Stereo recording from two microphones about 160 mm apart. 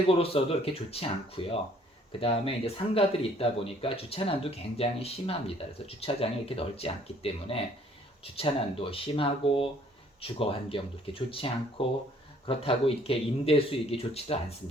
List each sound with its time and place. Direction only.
0.2 s speech: 35° left (ahead or behind)